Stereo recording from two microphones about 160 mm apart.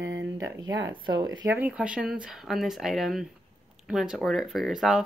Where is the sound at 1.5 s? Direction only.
10° right (ahead or behind).